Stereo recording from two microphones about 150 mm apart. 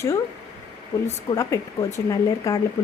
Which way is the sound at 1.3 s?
20° left (ahead or behind).